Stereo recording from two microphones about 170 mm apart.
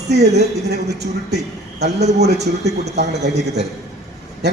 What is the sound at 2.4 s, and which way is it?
Speech, 40° right (ahead or behind).